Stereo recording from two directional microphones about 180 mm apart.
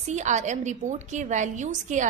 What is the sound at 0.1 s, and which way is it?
A woman's voice, 40° right (ahead or behind).